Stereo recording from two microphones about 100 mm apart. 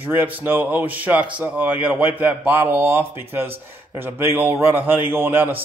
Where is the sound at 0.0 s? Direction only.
20° right (ahead or behind).